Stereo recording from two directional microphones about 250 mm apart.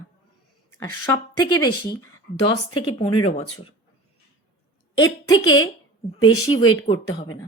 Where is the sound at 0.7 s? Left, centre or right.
Centre.